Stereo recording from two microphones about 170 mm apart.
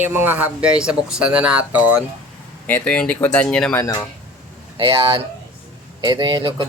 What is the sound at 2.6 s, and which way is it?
Speech, 10° left (ahead or behind).